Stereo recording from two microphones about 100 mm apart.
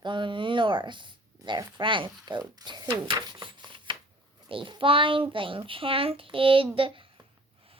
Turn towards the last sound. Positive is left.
turn(degrees=-65)  # may be behind; listen again after turning